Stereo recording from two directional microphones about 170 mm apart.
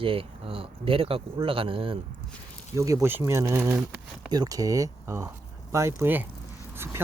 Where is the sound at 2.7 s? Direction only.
20° right (ahead or behind).